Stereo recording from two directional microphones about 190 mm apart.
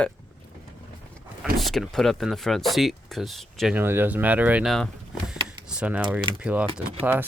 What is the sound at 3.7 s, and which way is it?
Speech, 10° right (ahead or behind).